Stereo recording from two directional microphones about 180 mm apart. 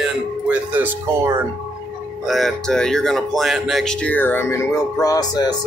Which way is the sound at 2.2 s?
Centre (ahead or behind).